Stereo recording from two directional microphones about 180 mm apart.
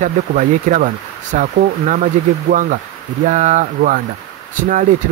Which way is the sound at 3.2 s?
45° right (ahead or behind).